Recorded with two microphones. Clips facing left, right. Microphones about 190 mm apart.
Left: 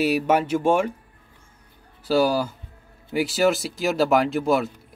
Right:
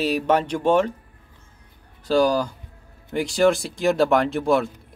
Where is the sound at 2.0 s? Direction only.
5° left (ahead or behind).